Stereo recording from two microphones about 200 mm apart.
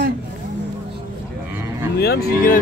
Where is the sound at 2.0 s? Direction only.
50° left (ahead or behind).